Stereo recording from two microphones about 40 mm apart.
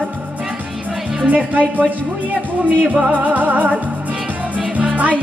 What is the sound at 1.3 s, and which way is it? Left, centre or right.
Speech, right.